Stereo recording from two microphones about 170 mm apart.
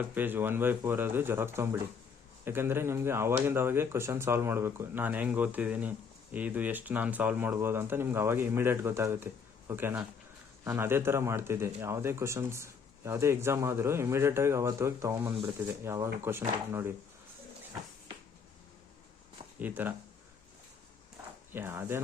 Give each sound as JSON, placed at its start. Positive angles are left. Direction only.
{"t": 0.0, "sound": "speech", "side_deg": -10}
{"t": 19.5, "sound": "speech", "side_deg": -10}
{"t": 21.5, "sound": "speech", "side_deg": -15}